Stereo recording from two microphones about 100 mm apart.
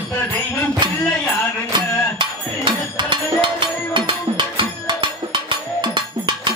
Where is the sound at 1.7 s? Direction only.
55° right (ahead or behind).